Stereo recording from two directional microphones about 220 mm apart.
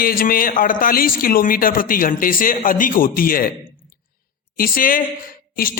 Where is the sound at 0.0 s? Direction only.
40° left (ahead or behind).